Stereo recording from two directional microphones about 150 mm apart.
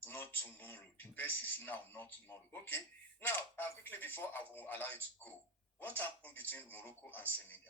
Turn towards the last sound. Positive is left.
turn(degrees=10)  # may be behind; listen again after turning